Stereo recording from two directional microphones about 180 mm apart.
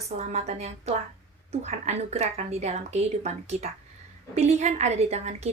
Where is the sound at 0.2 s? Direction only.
35° right (ahead or behind).